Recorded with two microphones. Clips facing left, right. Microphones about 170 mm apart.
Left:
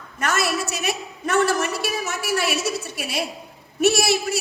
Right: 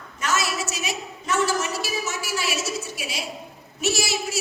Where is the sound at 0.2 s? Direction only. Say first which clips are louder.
Left 3 dB; 55° left (ahead or behind).